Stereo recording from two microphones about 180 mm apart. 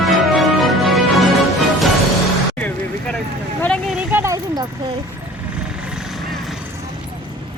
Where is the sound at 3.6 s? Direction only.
5° left (ahead or behind).